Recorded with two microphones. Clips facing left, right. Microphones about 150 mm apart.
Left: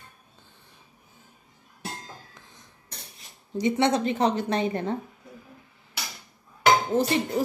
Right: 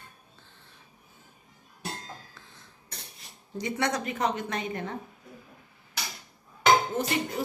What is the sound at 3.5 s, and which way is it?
A woman's voice, 20° left (ahead or behind).